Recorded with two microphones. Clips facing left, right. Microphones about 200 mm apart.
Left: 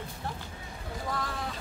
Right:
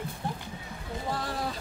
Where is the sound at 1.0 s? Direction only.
30° right (ahead or behind).